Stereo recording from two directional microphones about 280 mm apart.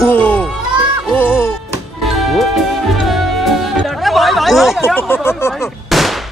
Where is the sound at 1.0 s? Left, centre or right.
Centre.